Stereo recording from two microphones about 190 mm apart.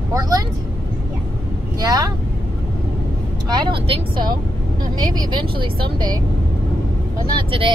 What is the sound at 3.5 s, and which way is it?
Speech, 25° right (ahead or behind).